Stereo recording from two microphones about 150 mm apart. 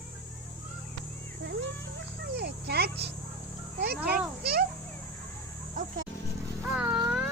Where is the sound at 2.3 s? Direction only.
90° right.